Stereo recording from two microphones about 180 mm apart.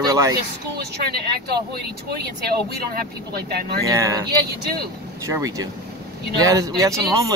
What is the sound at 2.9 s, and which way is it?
Speech, 60° right (ahead or behind).